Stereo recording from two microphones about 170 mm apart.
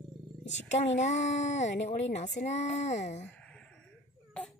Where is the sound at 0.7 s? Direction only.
40° left (ahead or behind).